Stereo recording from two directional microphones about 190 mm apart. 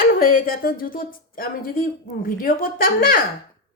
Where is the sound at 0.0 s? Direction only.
50° left (ahead or behind).